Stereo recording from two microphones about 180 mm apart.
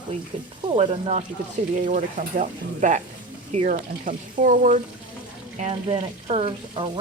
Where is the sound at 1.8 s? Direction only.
45° right (ahead or behind).